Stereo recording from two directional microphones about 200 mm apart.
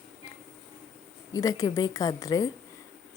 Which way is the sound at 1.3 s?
15° left (ahead or behind).